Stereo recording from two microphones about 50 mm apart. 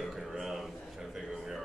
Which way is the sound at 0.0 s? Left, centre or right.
Centre.